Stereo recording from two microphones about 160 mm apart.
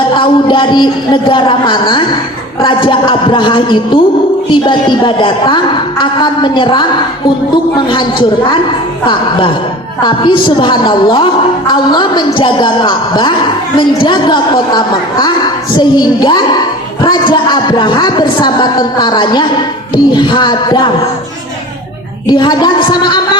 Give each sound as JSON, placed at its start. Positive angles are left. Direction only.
{"t": 0.1, "sound": "a woman's voice", "side_deg": 30}
{"t": 10.0, "sound": "a woman's voice", "side_deg": 30}
{"t": 22.3, "sound": "a woman's voice", "side_deg": 30}